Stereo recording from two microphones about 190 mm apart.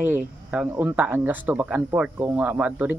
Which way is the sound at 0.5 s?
10° right (ahead or behind).